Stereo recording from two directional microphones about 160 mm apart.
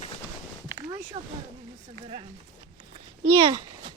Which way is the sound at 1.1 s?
35° right (ahead or behind).